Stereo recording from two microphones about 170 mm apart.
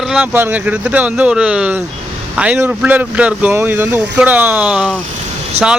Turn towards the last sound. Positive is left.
turn(degrees=-40)  # may be behind; listen again after turning